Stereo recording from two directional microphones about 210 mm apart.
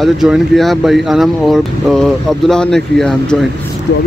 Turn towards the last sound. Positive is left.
turn(degrees=5)  # may be behind; listen again after turning